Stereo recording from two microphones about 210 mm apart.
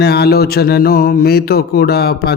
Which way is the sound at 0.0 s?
50° left (ahead or behind).